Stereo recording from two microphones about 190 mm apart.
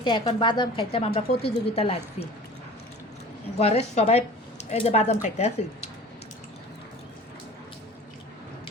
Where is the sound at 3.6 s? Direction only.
35° left (ahead or behind).